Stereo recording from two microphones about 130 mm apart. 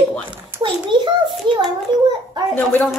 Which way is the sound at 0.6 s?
35° right (ahead or behind).